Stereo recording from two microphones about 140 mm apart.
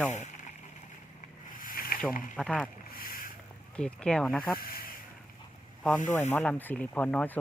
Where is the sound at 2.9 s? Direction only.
90° left.